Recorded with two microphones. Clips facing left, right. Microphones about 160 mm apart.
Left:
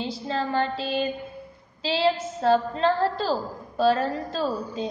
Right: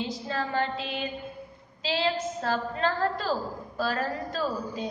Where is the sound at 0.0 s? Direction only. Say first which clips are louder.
Left 3 dB; 30° left (ahead or behind).